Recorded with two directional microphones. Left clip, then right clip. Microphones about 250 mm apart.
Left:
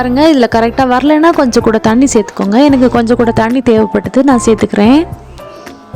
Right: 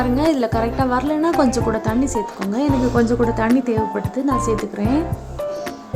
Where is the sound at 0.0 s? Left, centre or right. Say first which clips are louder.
Left 10 dB; left.